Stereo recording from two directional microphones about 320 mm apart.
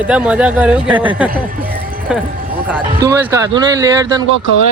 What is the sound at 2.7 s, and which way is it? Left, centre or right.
Speech, centre.